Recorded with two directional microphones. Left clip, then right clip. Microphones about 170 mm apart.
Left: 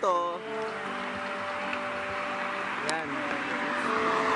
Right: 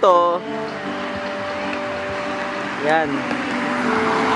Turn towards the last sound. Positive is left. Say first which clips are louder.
# right 8 dB
turn(degrees=-20)  # may be behind; listen again after turning